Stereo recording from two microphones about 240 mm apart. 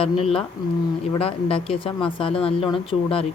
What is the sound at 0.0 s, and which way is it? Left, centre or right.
Speech, left.